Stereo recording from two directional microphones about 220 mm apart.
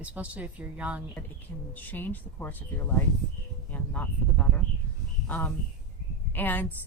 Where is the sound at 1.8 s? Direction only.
10° left (ahead or behind).